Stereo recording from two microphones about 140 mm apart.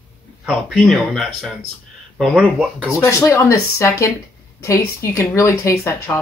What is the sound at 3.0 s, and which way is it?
Speech, 20° left (ahead or behind).